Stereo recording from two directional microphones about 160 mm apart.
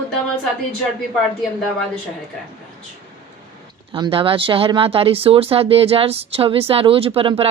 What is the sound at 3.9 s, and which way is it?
Speech, 30° right (ahead or behind).